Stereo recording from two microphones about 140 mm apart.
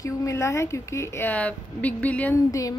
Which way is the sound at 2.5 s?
25° left (ahead or behind).